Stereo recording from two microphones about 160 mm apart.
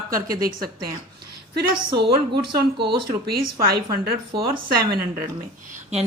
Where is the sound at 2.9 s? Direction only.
80° right.